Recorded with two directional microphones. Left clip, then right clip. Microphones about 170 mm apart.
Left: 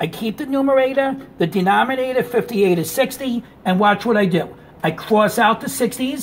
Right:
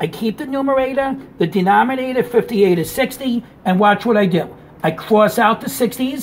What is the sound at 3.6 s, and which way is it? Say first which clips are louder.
Speech: right 2 dB; 30° left (ahead or behind).